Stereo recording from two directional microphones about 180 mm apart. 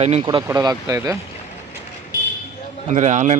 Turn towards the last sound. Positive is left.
turn(degrees=-40)  # may be behind; listen again after turning